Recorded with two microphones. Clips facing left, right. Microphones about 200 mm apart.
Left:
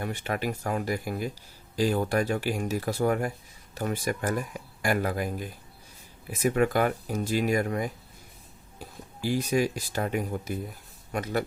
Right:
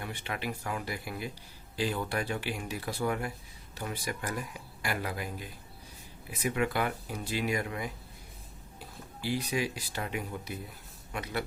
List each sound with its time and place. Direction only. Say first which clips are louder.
0.0 s speech: left 7 dB; 45° left (ahead or behind)
9.2 s speech: left 6 dB; 45° left (ahead or behind)